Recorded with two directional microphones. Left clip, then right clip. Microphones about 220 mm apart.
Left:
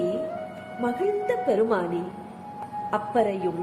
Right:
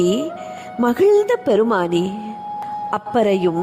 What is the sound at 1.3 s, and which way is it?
Speech, 45° right (ahead or behind).